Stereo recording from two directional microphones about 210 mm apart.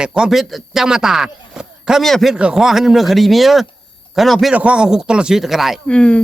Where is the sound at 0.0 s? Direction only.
5° right (ahead or behind).